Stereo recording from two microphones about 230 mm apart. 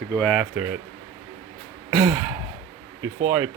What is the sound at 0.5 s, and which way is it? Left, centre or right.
Speech, centre.